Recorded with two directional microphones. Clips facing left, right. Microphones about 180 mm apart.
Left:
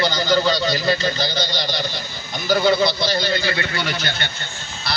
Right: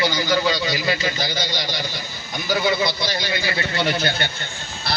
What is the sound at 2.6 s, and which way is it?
Speech, 10° right (ahead or behind).